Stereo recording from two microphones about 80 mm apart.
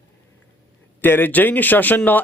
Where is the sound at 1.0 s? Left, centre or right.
Left.